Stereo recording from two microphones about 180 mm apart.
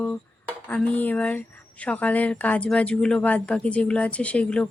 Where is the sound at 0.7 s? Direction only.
10° left (ahead or behind).